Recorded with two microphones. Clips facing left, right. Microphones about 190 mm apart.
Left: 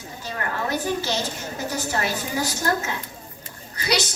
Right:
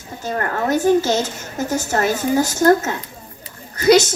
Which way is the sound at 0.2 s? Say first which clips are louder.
Right 7 dB; 50° right (ahead or behind).